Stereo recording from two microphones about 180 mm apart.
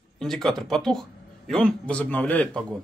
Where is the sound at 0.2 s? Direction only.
5° left (ahead or behind).